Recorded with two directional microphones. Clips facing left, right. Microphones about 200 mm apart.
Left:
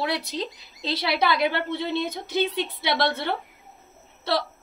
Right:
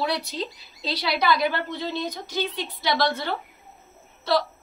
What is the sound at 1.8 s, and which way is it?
Speech, 60° left (ahead or behind).